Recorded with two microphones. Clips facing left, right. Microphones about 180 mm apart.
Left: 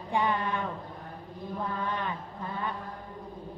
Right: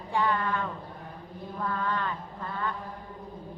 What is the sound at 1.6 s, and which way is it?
Mantra, 20° left (ahead or behind).